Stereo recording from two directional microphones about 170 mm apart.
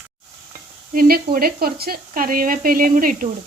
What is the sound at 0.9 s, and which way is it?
Speech, 60° right (ahead or behind).